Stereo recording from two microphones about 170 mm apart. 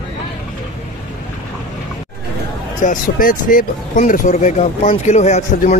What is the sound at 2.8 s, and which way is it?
Speech, 55° left (ahead or behind).